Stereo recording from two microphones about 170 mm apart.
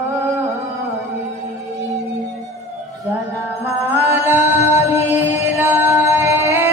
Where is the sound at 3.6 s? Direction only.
10° right (ahead or behind).